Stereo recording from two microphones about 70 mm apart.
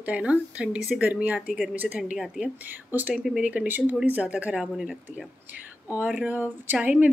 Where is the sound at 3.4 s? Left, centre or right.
Right.